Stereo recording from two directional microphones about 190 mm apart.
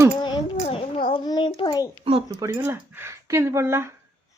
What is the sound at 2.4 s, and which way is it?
Speech, 15° right (ahead or behind).